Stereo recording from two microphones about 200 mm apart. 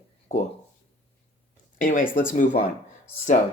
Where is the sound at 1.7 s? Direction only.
40° left (ahead or behind).